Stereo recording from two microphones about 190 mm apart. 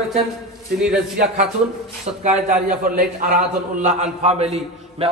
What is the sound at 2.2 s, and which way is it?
A man's voice, 40° right (ahead or behind).